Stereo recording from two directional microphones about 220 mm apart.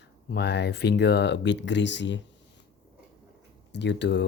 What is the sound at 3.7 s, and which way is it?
Speech, 50° left (ahead or behind).